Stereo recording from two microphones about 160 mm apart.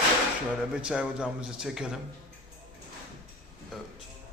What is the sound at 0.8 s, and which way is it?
A man's voice, 5° right (ahead or behind).